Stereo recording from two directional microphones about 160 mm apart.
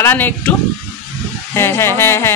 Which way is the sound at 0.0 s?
15° left (ahead or behind).